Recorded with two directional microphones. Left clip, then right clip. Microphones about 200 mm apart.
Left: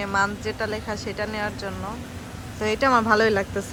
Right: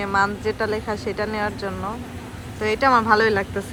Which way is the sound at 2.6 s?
15° left (ahead or behind).